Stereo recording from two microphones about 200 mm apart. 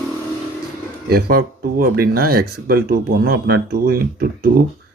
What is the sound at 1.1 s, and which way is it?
Speech, 50° right (ahead or behind).